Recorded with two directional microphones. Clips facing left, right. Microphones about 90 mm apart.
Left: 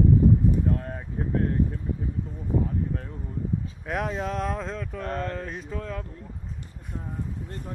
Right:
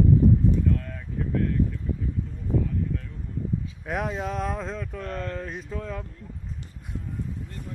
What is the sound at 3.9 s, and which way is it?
Speech, centre (ahead or behind).